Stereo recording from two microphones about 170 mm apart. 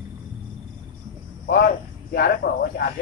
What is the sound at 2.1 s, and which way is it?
Speech, 65° left (ahead or behind).